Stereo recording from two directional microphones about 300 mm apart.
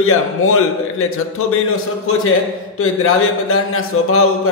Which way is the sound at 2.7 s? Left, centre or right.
Left.